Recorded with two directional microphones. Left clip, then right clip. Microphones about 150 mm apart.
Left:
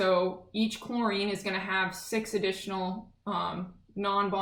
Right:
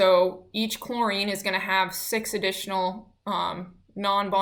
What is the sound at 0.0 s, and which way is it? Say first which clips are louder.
Speech: right 7 dB; 15° right (ahead or behind).